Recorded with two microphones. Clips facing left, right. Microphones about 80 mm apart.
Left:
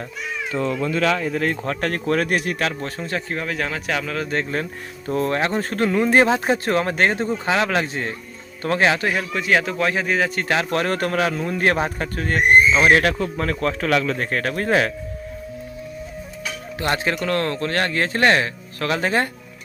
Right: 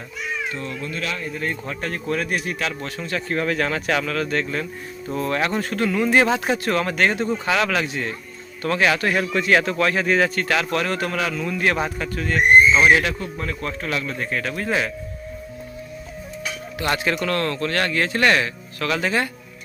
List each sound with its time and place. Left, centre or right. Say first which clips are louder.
1.3 s speech: left 5 dB; left
3.0 s speech: even; left
3.2 s speech: right 3 dB; centre
4.1 s a man's voice: right 1 dB; centre
4.4 s a man's voice: left 1 dB; left
9.1 s a man's voice: right 1 dB; centre
10.5 s a man's voice: left 1 dB; left
13.1 s a man's voice: left 5 dB; left
14.3 s speech: left 3 dB; left
16.8 s a man's voice: even; left